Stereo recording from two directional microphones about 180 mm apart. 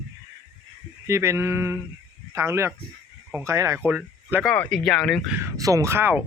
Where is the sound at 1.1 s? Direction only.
15° right (ahead or behind).